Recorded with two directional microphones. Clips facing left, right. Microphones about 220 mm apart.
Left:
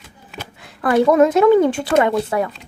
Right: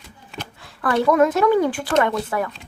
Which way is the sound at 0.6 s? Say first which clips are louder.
Left 5 dB; 15° left (ahead or behind).